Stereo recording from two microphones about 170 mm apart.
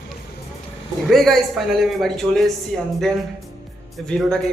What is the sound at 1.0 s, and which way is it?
Speech, centre (ahead or behind).